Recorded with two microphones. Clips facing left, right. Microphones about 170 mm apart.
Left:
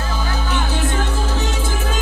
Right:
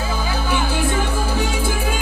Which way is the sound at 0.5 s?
10° right (ahead or behind).